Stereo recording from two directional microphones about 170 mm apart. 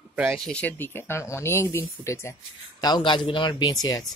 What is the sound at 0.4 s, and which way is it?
Speech, 5° left (ahead or behind).